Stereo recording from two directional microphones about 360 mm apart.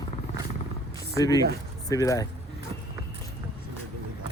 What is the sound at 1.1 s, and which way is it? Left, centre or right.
Speech, centre.